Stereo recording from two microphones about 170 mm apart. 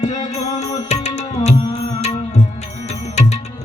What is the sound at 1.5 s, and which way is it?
Music, 30° left (ahead or behind).